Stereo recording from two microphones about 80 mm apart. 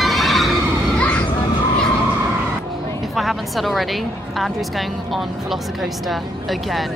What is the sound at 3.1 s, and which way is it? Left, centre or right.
A woman's voice, centre.